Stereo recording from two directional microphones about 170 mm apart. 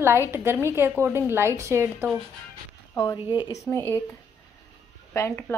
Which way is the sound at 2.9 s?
20° left (ahead or behind).